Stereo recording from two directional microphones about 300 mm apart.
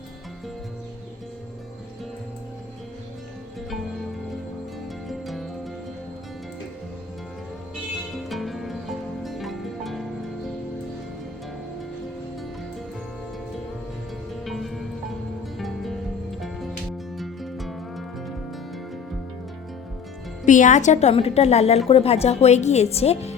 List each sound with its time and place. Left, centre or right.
5.0 s music: centre
8.3 s music: centre
14.4 s music: centre
20.4 s speech: left